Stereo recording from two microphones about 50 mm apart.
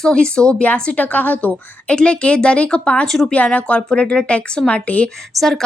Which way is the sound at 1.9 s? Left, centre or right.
Centre.